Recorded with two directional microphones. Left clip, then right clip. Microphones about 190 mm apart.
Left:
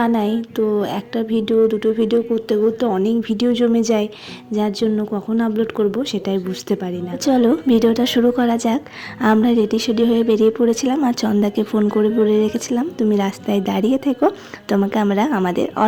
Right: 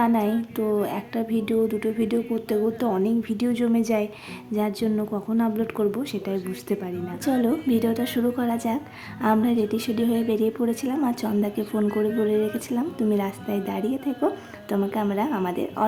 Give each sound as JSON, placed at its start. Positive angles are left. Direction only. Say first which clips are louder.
{"t": 0.0, "sound": "a woman's voice", "louder": "left 4 dB", "side_deg": 25}